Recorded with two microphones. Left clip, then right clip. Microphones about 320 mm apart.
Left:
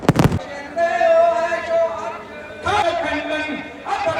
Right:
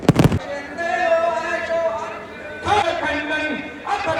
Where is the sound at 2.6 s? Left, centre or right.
Centre.